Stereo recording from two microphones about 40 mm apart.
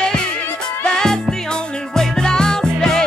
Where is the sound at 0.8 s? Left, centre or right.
Centre.